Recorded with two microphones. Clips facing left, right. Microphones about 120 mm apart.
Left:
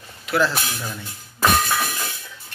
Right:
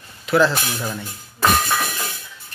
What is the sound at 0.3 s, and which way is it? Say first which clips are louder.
Speech: right 4 dB; centre (ahead or behind).